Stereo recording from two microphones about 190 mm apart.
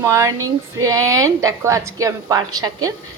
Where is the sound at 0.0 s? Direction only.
15° right (ahead or behind).